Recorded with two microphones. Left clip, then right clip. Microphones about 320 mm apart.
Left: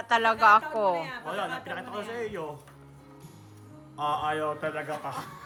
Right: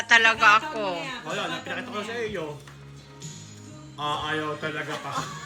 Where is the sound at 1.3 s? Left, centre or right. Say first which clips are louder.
Right 3 dB; centre.